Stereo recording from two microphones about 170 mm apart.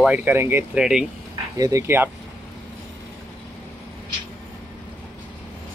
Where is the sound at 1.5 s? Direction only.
20° right (ahead or behind).